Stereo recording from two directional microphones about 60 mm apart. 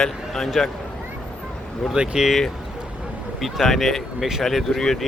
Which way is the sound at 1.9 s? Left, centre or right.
Centre.